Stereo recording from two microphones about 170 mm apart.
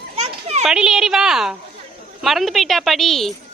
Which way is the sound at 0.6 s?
5° right (ahead or behind).